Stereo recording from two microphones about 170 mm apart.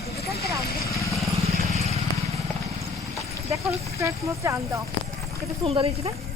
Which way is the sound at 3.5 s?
20° right (ahead or behind).